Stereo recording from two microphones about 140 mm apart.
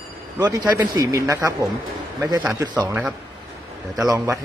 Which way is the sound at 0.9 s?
25° right (ahead or behind).